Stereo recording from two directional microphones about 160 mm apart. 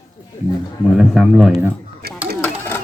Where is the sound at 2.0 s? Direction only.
75° right (ahead or behind).